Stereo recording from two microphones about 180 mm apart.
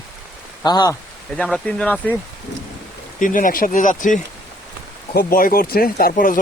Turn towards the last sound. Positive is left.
turn(degrees=50)  # may be behind; listen again after turning